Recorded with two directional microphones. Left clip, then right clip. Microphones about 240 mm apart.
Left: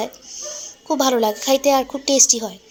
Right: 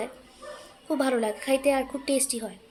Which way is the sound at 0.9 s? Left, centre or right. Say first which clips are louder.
Left 8 dB; centre.